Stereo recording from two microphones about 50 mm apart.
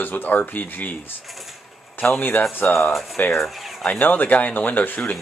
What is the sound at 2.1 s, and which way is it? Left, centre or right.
Speech, left.